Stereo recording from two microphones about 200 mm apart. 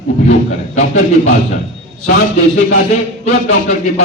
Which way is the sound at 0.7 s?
35° left (ahead or behind).